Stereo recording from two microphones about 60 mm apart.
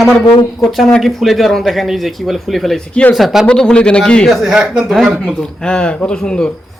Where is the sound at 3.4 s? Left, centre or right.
Centre.